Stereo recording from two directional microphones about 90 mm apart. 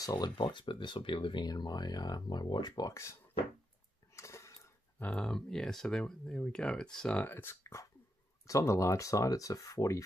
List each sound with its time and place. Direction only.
0.0 s speech: 55° left (ahead or behind)
1.5 s speech: 50° left (ahead or behind)
2.9 s speech: 30° left (ahead or behind)
4.1 s pig: 30° left (ahead or behind)
5.0 s speech: 10° left (ahead or behind)
7.2 s speech: 25° left (ahead or behind)